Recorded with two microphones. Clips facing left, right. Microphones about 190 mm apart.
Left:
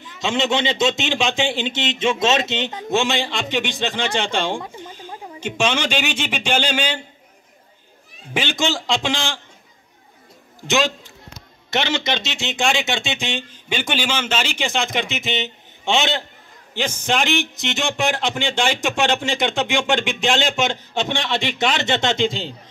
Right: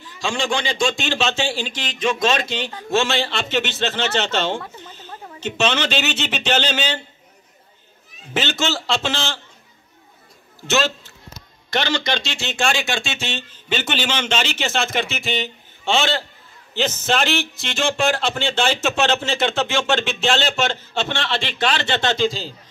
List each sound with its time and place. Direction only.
0.0 s a man's voice: 20° left (ahead or behind)
8.3 s a man's voice: 15° left (ahead or behind)
10.7 s a man's voice: 15° left (ahead or behind)